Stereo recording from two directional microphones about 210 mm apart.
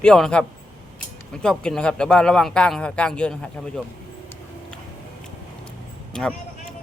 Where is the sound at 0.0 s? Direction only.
5° left (ahead or behind).